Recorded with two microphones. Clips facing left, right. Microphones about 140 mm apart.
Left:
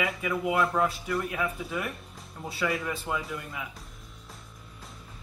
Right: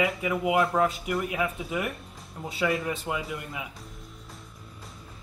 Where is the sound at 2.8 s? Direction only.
20° right (ahead or behind).